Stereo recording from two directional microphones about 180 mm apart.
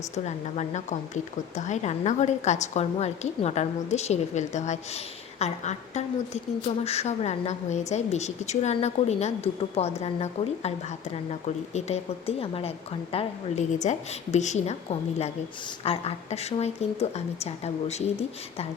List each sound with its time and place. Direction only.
0.3 s speech: 40° left (ahead or behind)